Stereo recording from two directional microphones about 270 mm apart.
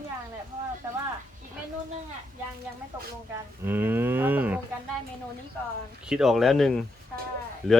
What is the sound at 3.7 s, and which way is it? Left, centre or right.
Cattle, centre.